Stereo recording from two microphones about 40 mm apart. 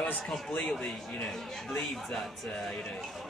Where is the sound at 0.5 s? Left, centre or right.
Left.